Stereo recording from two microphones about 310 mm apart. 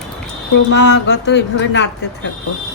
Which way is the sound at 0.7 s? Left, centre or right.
Left.